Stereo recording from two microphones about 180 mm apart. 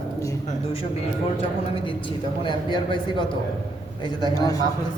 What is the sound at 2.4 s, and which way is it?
Speech, 25° left (ahead or behind).